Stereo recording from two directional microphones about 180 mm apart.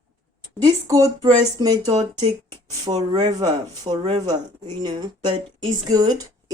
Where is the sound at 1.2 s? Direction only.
20° right (ahead or behind).